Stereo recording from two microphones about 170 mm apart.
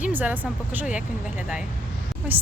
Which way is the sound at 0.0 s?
10° right (ahead or behind).